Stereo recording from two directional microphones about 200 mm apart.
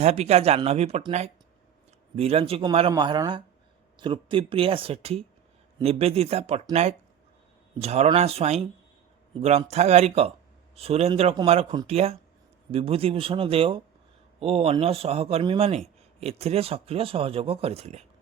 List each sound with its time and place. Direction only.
0.0 s speech: 30° right (ahead or behind)